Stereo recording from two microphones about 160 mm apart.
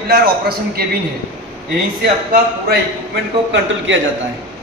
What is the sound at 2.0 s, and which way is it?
Speech, 90° right.